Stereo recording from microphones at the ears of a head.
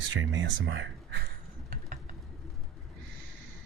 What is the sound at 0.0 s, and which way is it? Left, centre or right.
Speech, right.